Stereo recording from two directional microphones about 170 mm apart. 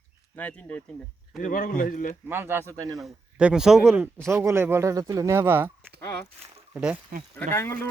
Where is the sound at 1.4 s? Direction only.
55° left (ahead or behind).